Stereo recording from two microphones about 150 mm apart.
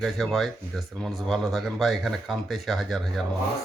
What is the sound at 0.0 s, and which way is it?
Speech, centre (ahead or behind).